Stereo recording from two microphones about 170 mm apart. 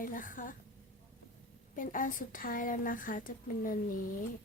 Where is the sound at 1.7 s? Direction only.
55° left (ahead or behind).